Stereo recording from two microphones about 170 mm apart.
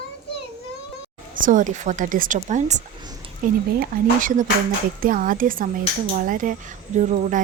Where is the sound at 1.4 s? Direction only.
50° right (ahead or behind).